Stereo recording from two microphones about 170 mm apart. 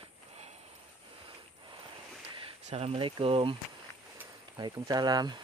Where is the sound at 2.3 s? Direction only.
35° right (ahead or behind).